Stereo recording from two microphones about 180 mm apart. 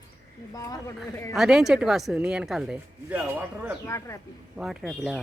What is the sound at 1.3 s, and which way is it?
Speech, centre (ahead or behind).